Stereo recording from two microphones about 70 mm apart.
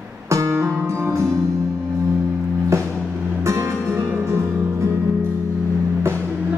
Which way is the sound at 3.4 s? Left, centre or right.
Right.